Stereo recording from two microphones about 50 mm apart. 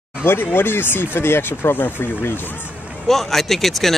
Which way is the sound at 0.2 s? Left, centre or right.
Left.